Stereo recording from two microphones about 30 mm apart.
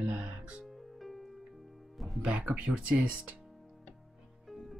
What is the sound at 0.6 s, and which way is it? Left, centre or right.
Music, centre.